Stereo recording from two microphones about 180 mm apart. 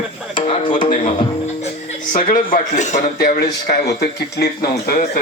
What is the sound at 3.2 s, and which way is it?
Speech, 60° left (ahead or behind).